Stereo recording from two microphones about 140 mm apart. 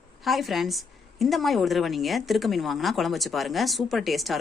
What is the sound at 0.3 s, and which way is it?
A woman's voice, centre (ahead or behind).